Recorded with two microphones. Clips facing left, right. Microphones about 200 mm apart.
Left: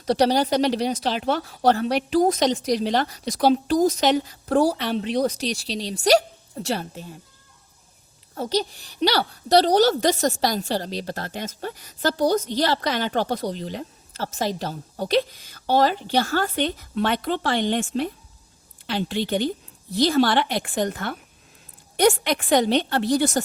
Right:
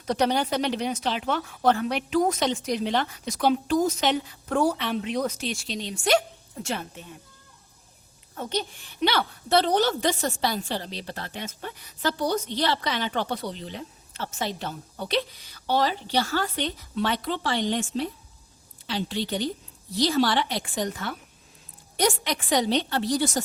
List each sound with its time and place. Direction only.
0.0 s a woman's voice: 35° left (ahead or behind)
8.4 s a woman's voice: 35° left (ahead or behind); by 23.4 s 60° left (ahead or behind)